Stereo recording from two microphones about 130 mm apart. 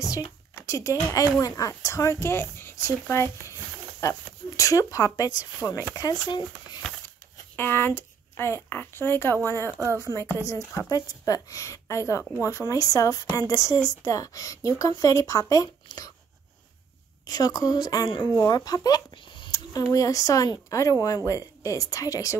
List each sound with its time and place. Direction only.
0.6 s a woman's voice: 20° left (ahead or behind)
7.5 s speech: 15° left (ahead or behind)
9.8 s speech: 25° right (ahead or behind)
10.0 s a woman's voice: 25° left (ahead or behind)
17.3 s a woman's voice: 30° left (ahead or behind)